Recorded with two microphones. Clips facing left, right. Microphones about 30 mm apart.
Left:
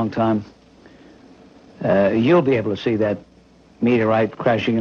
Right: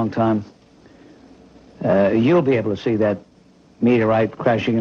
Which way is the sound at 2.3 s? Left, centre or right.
Centre.